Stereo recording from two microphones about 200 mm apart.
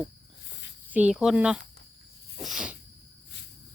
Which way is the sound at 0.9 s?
5° right (ahead or behind).